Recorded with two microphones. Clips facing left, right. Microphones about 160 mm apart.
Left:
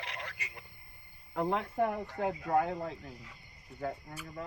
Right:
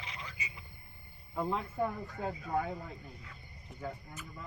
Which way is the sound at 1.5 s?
70° left (ahead or behind).